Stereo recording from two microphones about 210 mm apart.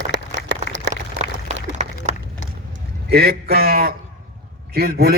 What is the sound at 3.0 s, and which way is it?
A man's voice, 50° right (ahead or behind).